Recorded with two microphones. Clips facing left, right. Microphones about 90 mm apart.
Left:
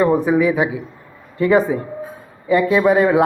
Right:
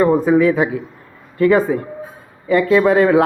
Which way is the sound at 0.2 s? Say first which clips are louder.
Right 2 dB; 15° left (ahead or behind).